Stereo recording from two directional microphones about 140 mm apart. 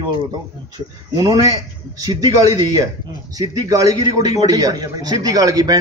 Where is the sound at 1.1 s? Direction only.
25° right (ahead or behind).